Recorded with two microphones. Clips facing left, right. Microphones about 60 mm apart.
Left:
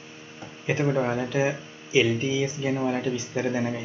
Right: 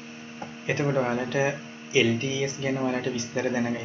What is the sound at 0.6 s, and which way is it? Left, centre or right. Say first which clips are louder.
Speech: left 2 dB; centre.